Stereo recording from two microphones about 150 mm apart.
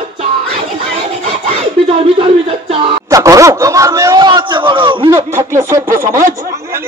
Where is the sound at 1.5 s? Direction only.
40° right (ahead or behind).